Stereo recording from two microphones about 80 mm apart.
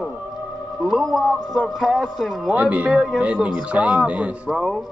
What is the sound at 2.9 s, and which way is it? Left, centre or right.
Speech, centre.